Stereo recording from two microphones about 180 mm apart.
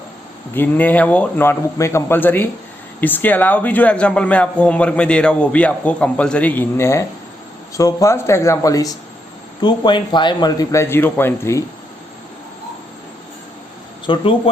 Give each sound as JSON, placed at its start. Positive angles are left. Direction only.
{"t": 0.5, "sound": "a man's voice", "side_deg": 10}
{"t": 14.1, "sound": "a man's voice", "side_deg": 30}